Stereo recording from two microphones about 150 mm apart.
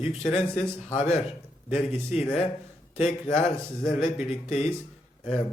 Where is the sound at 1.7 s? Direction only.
45° left (ahead or behind).